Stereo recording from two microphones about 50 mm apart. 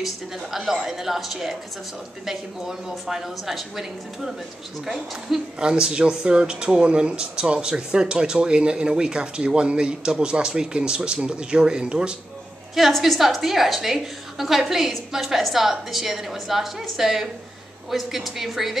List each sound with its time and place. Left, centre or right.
0.0 s a woman's voice: centre
12.7 s a woman's voice: centre